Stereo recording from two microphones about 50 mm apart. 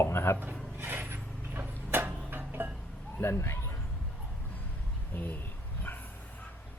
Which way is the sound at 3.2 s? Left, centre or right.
Left.